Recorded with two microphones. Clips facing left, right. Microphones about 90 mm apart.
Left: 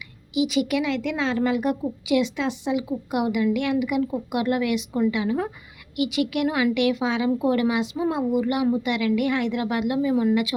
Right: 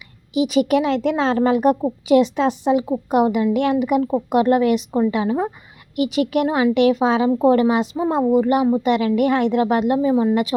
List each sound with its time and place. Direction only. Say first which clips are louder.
0.3 s a woman's voice: right 5 dB; 40° right (ahead or behind)